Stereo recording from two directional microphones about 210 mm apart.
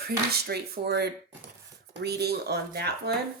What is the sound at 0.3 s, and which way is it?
A woman's voice, 50° right (ahead or behind).